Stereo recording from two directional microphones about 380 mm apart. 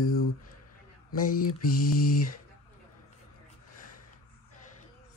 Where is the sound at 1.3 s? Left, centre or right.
Left.